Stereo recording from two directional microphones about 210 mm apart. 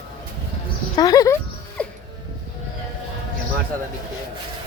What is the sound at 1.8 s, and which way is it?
Music, 5° left (ahead or behind).